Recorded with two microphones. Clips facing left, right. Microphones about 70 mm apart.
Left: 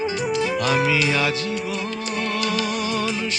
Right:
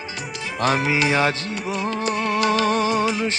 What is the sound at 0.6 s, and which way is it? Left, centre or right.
Music, right.